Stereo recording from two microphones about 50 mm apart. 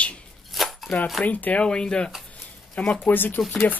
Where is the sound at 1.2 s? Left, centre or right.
Left.